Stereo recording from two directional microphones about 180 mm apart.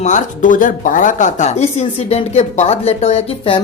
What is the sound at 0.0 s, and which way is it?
Speech, 45° left (ahead or behind).